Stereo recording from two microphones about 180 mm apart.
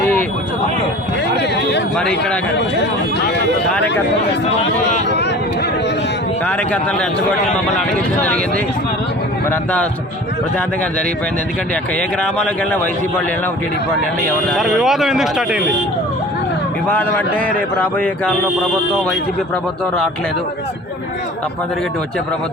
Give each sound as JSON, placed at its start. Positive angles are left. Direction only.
{"t": 0.0, "sound": "a sound", "side_deg": 10}
{"t": 1.4, "sound": "a sound", "side_deg": 70}
{"t": 2.0, "sound": "speech", "side_deg": 5}
{"t": 5.0, "sound": "speech", "side_deg": 75}
{"t": 6.4, "sound": "speech", "side_deg": 10}
{"t": 11.7, "sound": "speech", "side_deg": 5}
{"t": 14.5, "sound": "speech", "side_deg": 0}
{"t": 16.9, "sound": "speech", "side_deg": 10}